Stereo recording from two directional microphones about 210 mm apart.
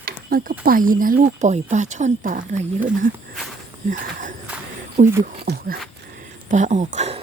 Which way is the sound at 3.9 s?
40° right (ahead or behind).